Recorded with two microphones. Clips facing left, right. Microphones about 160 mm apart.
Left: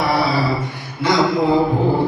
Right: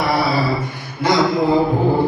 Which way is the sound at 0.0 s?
Centre (ahead or behind).